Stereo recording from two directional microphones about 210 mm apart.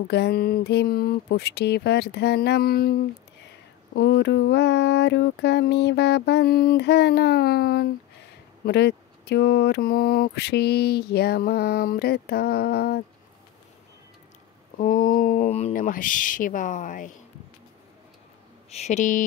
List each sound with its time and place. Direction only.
0.1 s speech: 50° left (ahead or behind)
14.8 s speech: 40° left (ahead or behind)
18.7 s speech: 30° left (ahead or behind)